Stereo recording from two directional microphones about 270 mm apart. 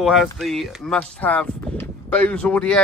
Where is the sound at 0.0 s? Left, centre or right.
Centre.